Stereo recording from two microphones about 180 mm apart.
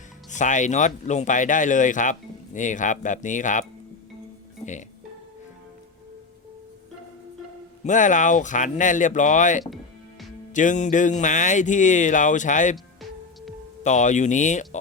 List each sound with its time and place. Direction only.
0.3 s speech: 45° left (ahead or behind)
7.9 s speech: 45° left (ahead or behind)
12.7 s music: centre (ahead or behind)
13.8 s speech: 40° left (ahead or behind)